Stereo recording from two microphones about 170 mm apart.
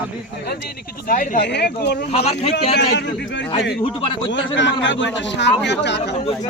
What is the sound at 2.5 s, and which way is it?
Speech, 90° left.